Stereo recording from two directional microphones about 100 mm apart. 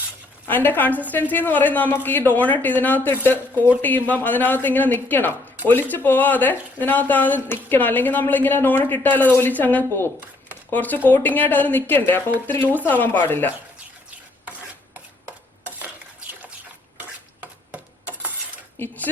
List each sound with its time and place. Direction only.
0.4 s speech: 20° left (ahead or behind)
17.0 s stir: 15° right (ahead or behind)
18.8 s speech: 20° left (ahead or behind)